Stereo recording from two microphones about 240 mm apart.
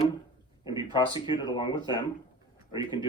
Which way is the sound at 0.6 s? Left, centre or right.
Centre.